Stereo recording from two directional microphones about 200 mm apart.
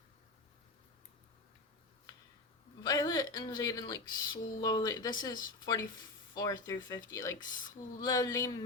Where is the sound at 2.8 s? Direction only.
15° left (ahead or behind).